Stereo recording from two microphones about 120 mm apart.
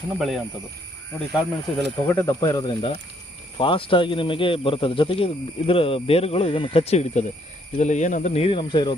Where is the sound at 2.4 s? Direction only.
35° left (ahead or behind).